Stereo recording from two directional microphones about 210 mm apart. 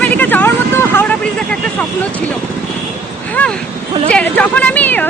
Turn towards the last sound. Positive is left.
turn(degrees=5)  # may be behind; listen again after turning